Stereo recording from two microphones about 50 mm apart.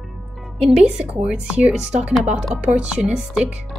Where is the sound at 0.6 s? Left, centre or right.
Centre.